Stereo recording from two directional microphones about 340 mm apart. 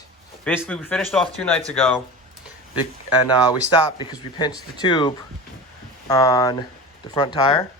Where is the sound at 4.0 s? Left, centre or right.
Centre.